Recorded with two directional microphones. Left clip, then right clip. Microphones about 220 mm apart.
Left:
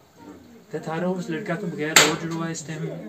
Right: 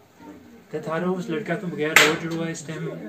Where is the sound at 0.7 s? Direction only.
10° left (ahead or behind).